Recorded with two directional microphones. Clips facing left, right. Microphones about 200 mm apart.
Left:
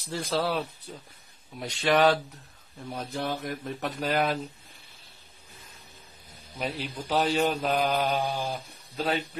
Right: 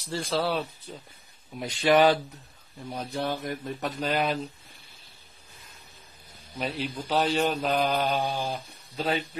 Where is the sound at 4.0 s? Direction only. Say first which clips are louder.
Left 1 dB; 5° left (ahead or behind).